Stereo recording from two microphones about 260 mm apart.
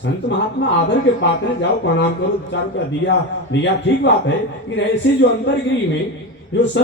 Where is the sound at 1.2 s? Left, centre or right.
Left.